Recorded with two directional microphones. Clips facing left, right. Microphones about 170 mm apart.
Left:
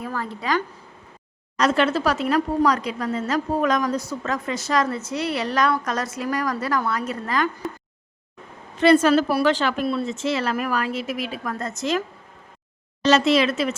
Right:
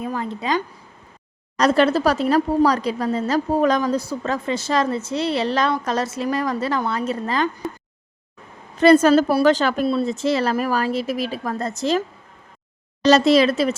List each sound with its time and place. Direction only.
0.0 s a woman's voice: 20° right (ahead or behind)
1.5 s a woman's voice: 35° right (ahead or behind)
8.8 s a woman's voice: 40° right (ahead or behind)
13.1 s a woman's voice: 35° right (ahead or behind)